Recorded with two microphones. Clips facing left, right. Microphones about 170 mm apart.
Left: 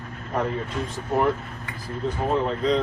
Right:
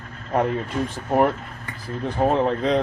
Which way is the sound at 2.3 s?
65° right (ahead or behind).